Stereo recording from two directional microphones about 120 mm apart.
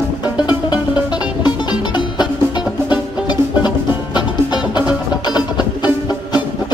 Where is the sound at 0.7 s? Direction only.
35° left (ahead or behind).